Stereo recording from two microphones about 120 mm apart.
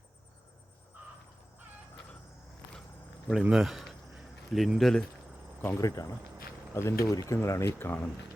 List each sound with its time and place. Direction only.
3.4 s speech: 5° right (ahead or behind)
5.6 s speech: 30° left (ahead or behind)